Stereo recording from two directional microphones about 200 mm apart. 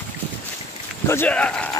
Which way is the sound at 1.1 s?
10° left (ahead or behind).